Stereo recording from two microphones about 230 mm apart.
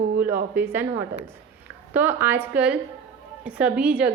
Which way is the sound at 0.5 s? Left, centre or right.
Centre.